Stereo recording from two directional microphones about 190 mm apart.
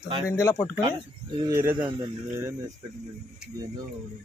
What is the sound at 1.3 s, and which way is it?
Speech, 20° right (ahead or behind).